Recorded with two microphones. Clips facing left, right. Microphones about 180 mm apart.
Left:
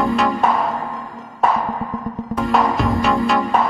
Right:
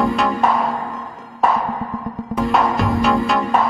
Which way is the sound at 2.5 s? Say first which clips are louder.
Left 1 dB; centre (ahead or behind).